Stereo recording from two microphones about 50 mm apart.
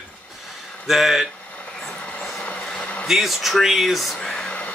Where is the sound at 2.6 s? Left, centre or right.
Centre.